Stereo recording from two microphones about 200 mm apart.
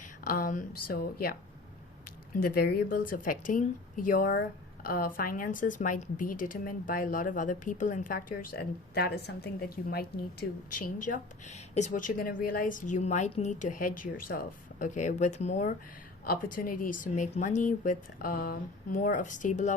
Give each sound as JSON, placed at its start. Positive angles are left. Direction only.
{"t": 0.0, "sound": "a woman's voice", "side_deg": 45}
{"t": 16.2, "sound": "speech", "side_deg": 45}